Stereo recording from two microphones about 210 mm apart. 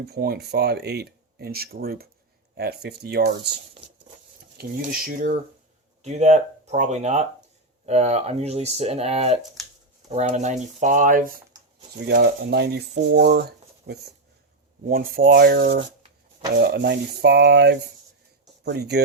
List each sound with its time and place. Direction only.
0.0 s speech: 50° right (ahead or behind)
4.5 s speech: 45° right (ahead or behind)
6.0 s speech: 35° right (ahead or behind)
9.6 s a sound: centre (ahead or behind)
10.1 s speech: 35° right (ahead or behind); by 19.0 s 50° right (ahead or behind)